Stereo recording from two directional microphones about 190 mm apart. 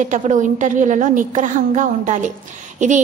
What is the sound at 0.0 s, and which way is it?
A woman's voice, 40° right (ahead or behind).